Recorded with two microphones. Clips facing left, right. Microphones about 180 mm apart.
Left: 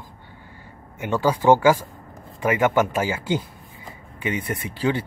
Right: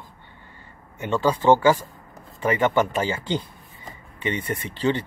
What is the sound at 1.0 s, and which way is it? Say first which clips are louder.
Speech: left 1 dB; 10° left (ahead or behind).